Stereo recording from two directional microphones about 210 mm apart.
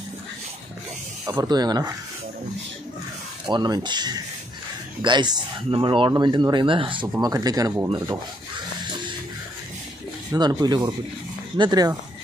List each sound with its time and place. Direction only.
1.2 s speech: 15° right (ahead or behind)
3.4 s speech: 20° right (ahead or behind)
10.3 s speech: 20° right (ahead or behind)